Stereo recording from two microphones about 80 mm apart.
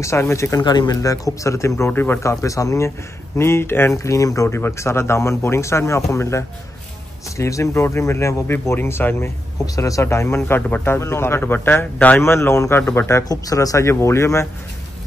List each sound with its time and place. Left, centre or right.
0.0 s speech: left
0.6 s speech: left
1.0 s speech: left
1.9 s a man's voice: left
2.4 s speech: left
3.3 s speech: left
4.6 s speech: left
9.8 s speech: left
10.0 s a man's voice: left
12.2 s a man's voice: left
13.3 s speech: left